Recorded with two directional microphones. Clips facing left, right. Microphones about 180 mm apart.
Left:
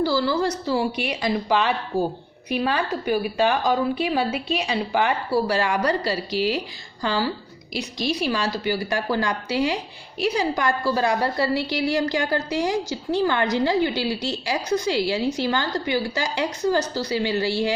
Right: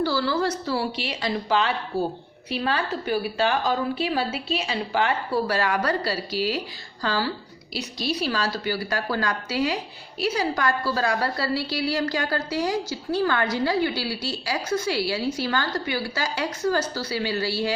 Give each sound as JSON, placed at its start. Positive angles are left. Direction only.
{"t": 0.0, "sound": "a woman's voice", "side_deg": 10}
{"t": 6.3, "sound": "a woman's voice", "side_deg": -40}
{"t": 7.0, "sound": "a woman's voice", "side_deg": 15}